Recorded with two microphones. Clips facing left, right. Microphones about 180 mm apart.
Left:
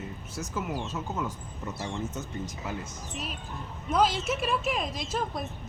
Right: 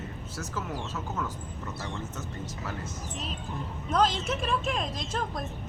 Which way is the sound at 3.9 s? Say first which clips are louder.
Left 1 dB; 5° left (ahead or behind).